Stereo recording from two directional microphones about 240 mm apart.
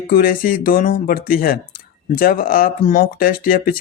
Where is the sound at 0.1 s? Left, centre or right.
Left.